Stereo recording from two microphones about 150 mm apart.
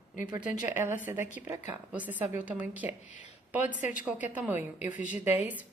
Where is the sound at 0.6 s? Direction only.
15° right (ahead or behind).